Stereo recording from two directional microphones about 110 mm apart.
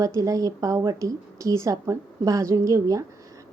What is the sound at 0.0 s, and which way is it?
Speech, 30° right (ahead or behind).